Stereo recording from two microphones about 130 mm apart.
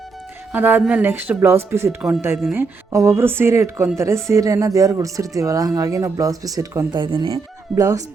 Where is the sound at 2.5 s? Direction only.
20° right (ahead or behind).